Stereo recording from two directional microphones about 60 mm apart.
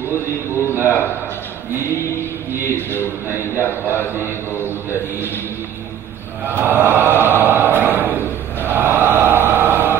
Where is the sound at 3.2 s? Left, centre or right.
Right.